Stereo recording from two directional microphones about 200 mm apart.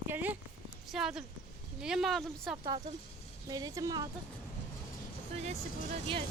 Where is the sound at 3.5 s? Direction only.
20° right (ahead or behind).